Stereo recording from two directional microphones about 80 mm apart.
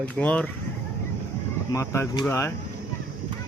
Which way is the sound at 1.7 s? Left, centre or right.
Left.